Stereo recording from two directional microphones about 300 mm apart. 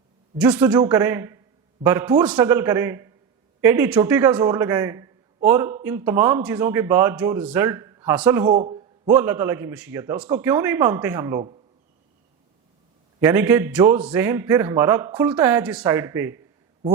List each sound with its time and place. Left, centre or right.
0.3 s a man's voice: centre
8.5 s a man's voice: centre
9.0 s a man's voice: centre
13.1 s a man's voice: centre